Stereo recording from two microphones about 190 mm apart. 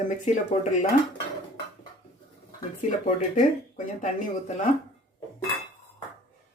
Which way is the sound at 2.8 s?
40° left (ahead or behind).